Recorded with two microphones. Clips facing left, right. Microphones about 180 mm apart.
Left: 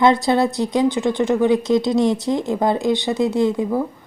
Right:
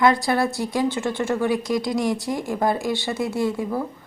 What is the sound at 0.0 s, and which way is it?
A woman's voice, 20° left (ahead or behind).